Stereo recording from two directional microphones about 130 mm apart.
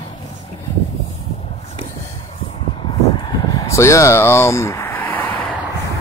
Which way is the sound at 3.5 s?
25° left (ahead or behind).